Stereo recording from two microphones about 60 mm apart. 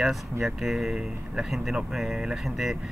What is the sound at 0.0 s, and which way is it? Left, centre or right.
Speech, centre.